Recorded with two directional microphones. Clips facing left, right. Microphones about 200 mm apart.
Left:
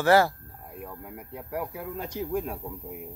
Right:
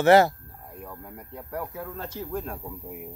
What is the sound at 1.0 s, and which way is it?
Speech, 5° left (ahead or behind).